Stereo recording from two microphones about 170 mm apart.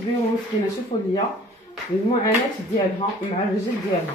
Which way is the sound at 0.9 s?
30° left (ahead or behind).